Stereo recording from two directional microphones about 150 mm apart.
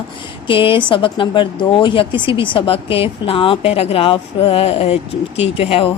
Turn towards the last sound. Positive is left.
turn(degrees=40)  # may be behind; listen again after turning